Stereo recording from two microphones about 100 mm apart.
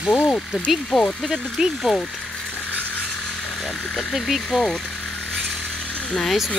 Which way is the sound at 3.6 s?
10° left (ahead or behind).